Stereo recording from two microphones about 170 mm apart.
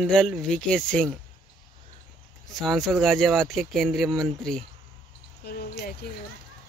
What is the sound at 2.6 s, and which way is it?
Speech, centre (ahead or behind).